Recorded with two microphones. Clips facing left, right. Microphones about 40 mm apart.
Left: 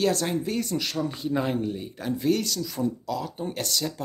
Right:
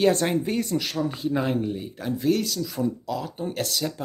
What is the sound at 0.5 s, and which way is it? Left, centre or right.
Speech, centre.